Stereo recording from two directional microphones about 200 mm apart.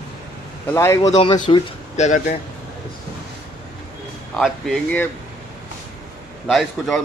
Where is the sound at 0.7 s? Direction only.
15° left (ahead or behind).